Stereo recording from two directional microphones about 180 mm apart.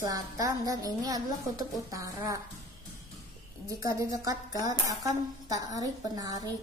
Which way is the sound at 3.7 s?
20° right (ahead or behind).